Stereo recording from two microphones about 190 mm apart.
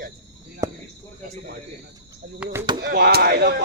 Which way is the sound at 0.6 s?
20° right (ahead or behind).